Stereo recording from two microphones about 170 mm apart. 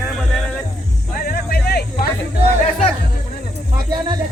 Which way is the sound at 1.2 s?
65° left (ahead or behind).